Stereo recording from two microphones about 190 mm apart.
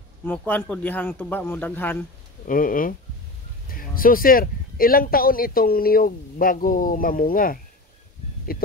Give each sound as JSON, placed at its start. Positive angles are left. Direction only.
{"t": 0.2, "sound": "a man's voice", "side_deg": 10}
{"t": 2.4, "sound": "speech", "side_deg": 45}